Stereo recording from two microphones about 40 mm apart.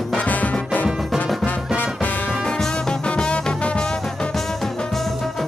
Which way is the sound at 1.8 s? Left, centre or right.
Left.